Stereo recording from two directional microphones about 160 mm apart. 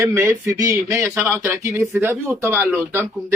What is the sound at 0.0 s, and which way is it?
Speech, 15° right (ahead or behind).